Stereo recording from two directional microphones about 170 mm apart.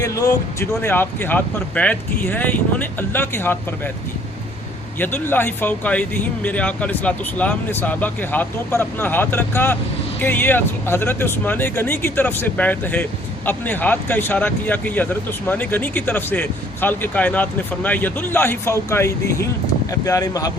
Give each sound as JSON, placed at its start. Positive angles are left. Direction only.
{"t": 0.0, "sound": "speech", "side_deg": 20}
{"t": 4.9, "sound": "speech", "side_deg": 10}